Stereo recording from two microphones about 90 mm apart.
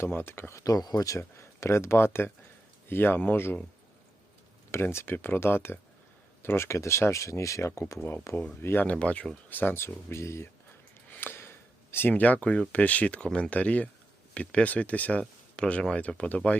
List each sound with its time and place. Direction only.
0.0 s speech: 25° left (ahead or behind)
0.6 s speech: 45° left (ahead or behind); by 3.6 s 25° left (ahead or behind)
4.7 s speech: 30° left (ahead or behind); by 16.6 s 15° left (ahead or behind)